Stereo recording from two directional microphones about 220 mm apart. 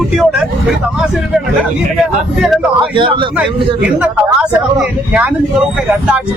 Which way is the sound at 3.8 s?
5° right (ahead or behind).